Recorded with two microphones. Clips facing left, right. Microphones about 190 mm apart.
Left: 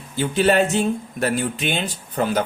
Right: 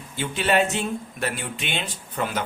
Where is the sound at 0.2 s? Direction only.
40° left (ahead or behind).